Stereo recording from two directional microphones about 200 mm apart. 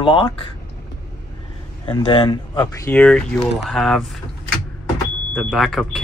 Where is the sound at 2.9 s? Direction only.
5° left (ahead or behind).